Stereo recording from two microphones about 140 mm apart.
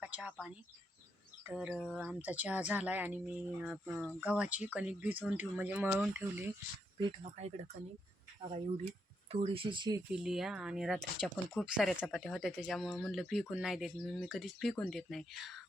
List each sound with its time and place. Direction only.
0.0 s a sound: 10° right (ahead or behind)
1.5 s speech: 5° right (ahead or behind)
7.3 s speech: 55° right (ahead or behind)
9.3 s speech: 45° right (ahead or behind)
10.1 s speech: 5° right (ahead or behind)